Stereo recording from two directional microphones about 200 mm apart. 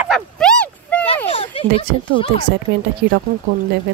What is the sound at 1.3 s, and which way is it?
Speech, 30° left (ahead or behind).